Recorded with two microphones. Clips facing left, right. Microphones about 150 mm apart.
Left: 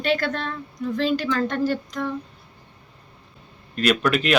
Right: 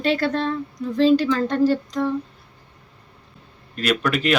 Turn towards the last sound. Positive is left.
turn(degrees=0)  # may be behind; listen again after turning